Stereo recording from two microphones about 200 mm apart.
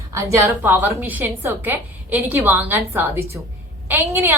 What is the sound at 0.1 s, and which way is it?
A woman's voice, 15° right (ahead or behind).